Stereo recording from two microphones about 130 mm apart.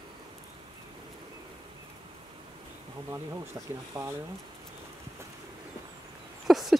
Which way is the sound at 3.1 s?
25° right (ahead or behind).